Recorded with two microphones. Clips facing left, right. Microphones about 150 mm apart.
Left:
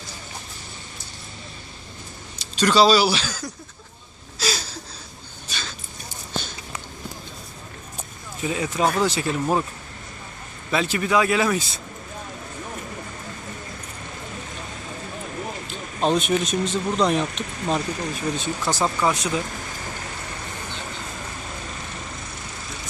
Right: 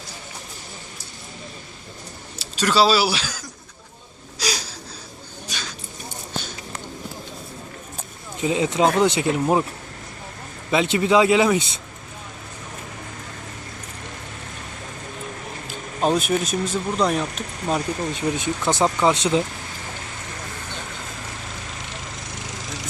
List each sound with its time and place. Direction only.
2.4 s speech: 5° right (ahead or behind)
4.4 s a sound: 15° right (ahead or behind)
5.5 s dog: 10° right (ahead or behind)
8.4 s speech: 20° right (ahead or behind)
10.7 s speech: 20° right (ahead or behind)
15.6 s speech: 5° right (ahead or behind)
18.1 s speech: 20° right (ahead or behind)